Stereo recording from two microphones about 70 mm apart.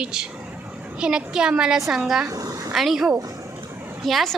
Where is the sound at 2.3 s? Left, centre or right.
Right.